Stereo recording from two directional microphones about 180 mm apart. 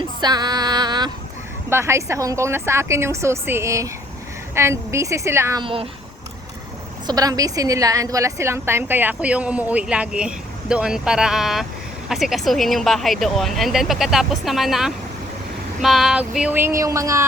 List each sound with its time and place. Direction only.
0.2 s female singing: 25° right (ahead or behind)
1.7 s a woman's voice: 15° right (ahead or behind)
5.6 s speech: 30° right (ahead or behind)
7.1 s a woman's voice: 20° right (ahead or behind)